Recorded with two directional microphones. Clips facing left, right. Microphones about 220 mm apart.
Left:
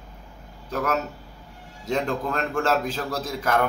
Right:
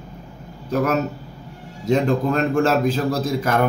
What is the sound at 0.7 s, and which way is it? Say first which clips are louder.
A man's voice: right 6 dB; 20° right (ahead or behind).